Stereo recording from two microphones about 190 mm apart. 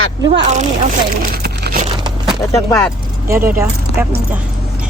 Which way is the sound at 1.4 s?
55° right (ahead or behind).